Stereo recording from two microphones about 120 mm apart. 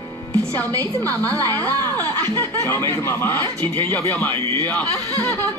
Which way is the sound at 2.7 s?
35° right (ahead or behind).